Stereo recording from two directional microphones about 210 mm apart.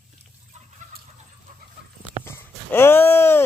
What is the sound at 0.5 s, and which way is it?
Chicken, 35° right (ahead or behind).